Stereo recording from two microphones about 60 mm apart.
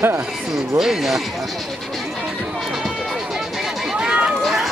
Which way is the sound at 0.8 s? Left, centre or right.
Centre.